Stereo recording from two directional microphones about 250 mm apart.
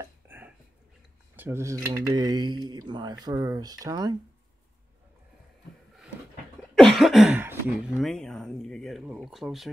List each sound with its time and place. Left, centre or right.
0.0 s a sound: centre
1.3 s speech: centre
6.7 s speech: centre